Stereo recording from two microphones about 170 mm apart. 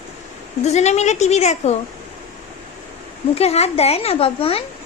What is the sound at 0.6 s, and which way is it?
A child's voice, 40° left (ahead or behind).